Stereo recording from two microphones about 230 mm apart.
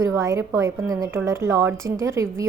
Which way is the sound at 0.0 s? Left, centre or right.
Centre.